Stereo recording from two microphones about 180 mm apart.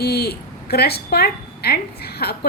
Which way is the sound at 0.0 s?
60° left (ahead or behind).